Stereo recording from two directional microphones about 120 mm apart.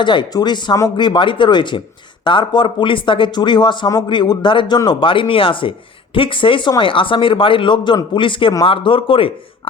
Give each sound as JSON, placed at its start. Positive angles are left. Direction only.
{"t": 0.0, "sound": "speech", "side_deg": 40}